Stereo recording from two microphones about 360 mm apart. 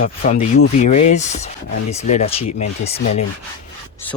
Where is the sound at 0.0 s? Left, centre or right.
Left.